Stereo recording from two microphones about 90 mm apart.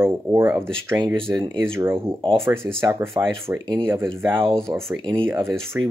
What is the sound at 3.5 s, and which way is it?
Speech, 35° right (ahead or behind).